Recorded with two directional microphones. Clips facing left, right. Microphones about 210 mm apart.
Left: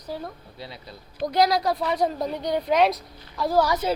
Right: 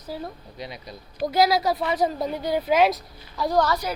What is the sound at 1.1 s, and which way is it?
Speech, 5° right (ahead or behind).